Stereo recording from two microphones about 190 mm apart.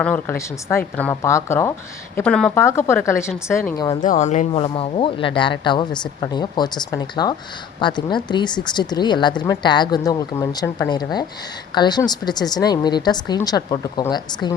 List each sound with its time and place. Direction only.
0.0 s speech: 10° left (ahead or behind)
4.0 s a woman's voice: 40° left (ahead or behind); by 14.5 s 20° left (ahead or behind)